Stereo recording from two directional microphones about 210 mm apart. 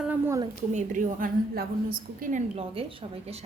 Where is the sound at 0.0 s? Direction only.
10° right (ahead or behind).